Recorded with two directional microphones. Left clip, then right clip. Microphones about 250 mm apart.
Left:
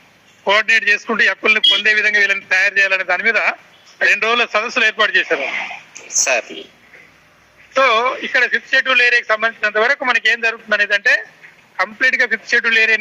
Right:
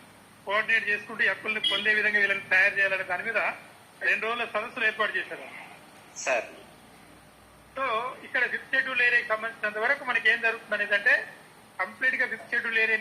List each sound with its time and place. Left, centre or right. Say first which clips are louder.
0.4 s a man's voice: left 12 dB; left
7.7 s a man's voice: left 16 dB; left